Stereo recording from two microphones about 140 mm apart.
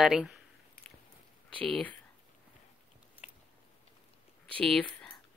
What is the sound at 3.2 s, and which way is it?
Biting, 60° left (ahead or behind).